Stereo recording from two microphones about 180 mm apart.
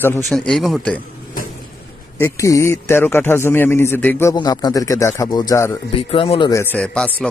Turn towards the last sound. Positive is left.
turn(degrees=5)  # may be behind; listen again after turning